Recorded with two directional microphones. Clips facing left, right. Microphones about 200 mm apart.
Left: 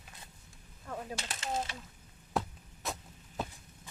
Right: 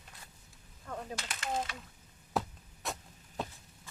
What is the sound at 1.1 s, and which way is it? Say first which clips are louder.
Speech: right 1 dB; 25° left (ahead or behind).